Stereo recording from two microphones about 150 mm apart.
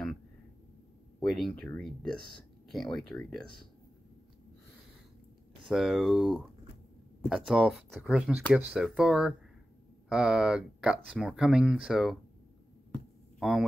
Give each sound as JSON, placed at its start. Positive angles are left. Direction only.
{"t": 1.2, "sound": "speech", "side_deg": 0}
{"t": 5.7, "sound": "speech", "side_deg": 0}
{"t": 13.4, "sound": "speech", "side_deg": 0}